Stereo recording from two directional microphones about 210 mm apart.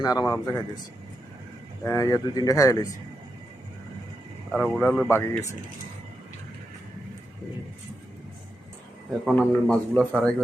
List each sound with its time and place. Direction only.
0.0 s speech: 15° left (ahead or behind)
1.8 s speech: 15° left (ahead or behind)
4.5 s speech: 5° left (ahead or behind)
9.2 s a man's voice: centre (ahead or behind)